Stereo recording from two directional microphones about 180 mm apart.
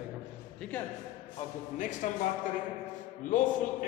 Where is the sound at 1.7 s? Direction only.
45° left (ahead or behind).